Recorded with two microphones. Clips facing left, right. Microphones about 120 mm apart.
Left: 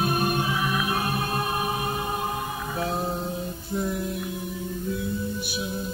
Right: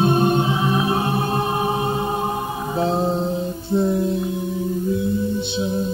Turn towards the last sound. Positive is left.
turn(degrees=-25)  # may be behind; listen again after turning